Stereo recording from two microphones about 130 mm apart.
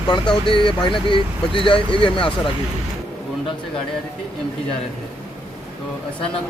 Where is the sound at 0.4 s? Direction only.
40° left (ahead or behind).